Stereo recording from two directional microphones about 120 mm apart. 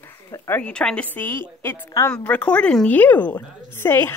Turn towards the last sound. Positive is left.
turn(degrees=20)  # may be behind; listen again after turning